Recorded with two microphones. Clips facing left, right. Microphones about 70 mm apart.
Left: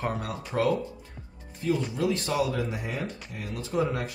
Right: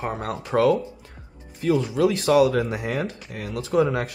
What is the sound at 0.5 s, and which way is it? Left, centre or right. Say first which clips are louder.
Speech: right 7 dB; right.